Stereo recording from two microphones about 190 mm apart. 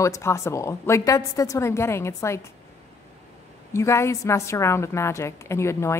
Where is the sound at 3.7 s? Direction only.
15° left (ahead or behind).